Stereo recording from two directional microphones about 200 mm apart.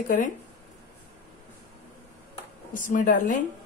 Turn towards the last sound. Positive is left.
turn(degrees=40)  # may be behind; listen again after turning